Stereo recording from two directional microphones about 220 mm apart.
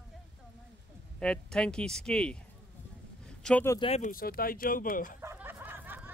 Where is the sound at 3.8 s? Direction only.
30° left (ahead or behind).